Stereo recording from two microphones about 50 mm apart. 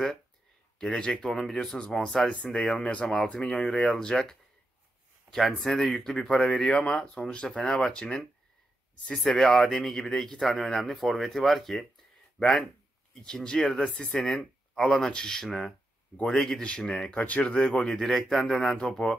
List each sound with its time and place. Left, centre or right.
0.7 s speech: centre
2.2 s speech: left
2.5 s speech: centre
2.8 s speech: left
3.1 s speech: centre
6.4 s a man's voice: left; by 12.5 s centre
13.1 s speech: centre
17.2 s speech: left
17.5 s speech: centre
18.0 s a man's voice: centre